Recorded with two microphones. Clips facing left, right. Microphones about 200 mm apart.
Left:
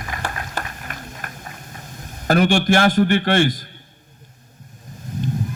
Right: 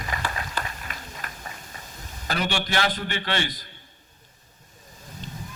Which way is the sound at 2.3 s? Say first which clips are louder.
Left 11 dB; 50° left (ahead or behind).